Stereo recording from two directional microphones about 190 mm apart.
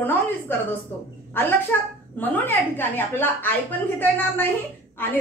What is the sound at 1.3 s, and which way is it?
A woman's voice, 10° left (ahead or behind).